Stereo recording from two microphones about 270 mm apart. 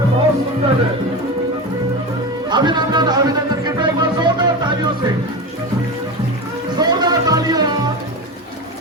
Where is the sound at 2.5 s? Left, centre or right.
Centre.